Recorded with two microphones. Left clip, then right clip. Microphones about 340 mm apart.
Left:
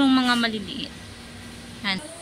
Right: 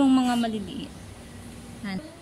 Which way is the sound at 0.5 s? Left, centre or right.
Centre.